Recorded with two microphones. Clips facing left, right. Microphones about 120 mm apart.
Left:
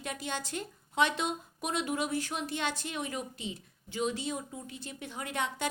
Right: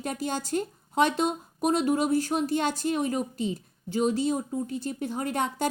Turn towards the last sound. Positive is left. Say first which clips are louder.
# right 6 dB
turn(degrees=-40)  # may be behind; listen again after turning